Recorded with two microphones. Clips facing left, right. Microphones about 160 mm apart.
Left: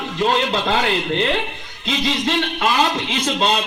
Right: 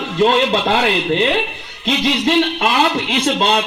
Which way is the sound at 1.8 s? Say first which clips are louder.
Right 4 dB; 45° right (ahead or behind).